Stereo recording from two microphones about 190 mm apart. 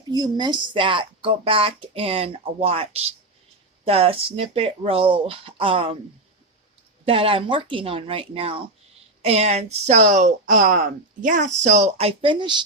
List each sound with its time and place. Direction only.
0.1 s speech: 20° right (ahead or behind)
7.0 s speech: 30° right (ahead or behind)